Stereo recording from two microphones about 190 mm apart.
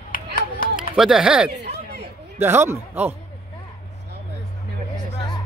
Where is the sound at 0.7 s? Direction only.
5° right (ahead or behind).